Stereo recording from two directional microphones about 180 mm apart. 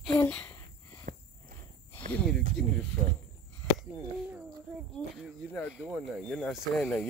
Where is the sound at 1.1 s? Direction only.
55° right (ahead or behind).